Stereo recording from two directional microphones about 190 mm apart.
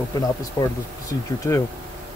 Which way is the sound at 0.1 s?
20° left (ahead or behind).